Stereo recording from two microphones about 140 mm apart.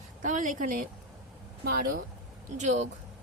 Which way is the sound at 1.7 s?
90° right.